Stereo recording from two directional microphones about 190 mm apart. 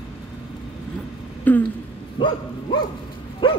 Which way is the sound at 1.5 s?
10° left (ahead or behind).